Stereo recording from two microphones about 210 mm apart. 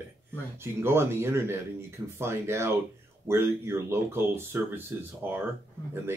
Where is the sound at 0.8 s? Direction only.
10° right (ahead or behind).